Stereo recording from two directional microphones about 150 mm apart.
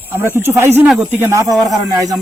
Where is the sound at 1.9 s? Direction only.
25° right (ahead or behind).